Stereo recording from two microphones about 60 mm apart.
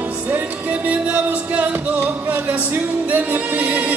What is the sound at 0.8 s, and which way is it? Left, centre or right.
Music, right.